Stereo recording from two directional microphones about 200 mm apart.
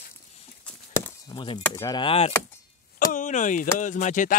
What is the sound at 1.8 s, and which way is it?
Speech, 20° left (ahead or behind).